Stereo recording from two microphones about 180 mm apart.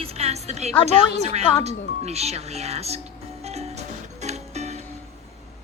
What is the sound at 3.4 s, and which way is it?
Music, 35° right (ahead or behind).